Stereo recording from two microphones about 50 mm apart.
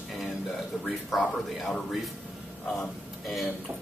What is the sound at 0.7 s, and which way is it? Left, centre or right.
Speech, centre.